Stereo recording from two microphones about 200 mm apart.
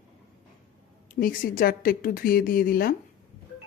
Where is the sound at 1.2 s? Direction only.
45° left (ahead or behind).